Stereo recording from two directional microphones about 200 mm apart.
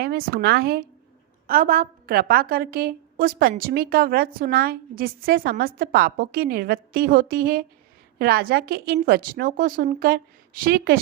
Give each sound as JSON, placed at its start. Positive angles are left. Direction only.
{"t": 0.0, "sound": "a woman's voice", "side_deg": -50}